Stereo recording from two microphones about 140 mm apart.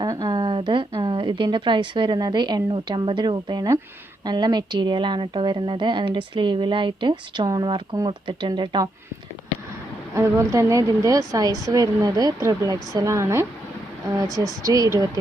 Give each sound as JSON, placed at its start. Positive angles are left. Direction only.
{"t": 0.0, "sound": "a sound", "side_deg": -30}
{"t": 1.0, "sound": "a woman's voice", "side_deg": -35}
{"t": 10.2, "sound": "speech", "side_deg": -20}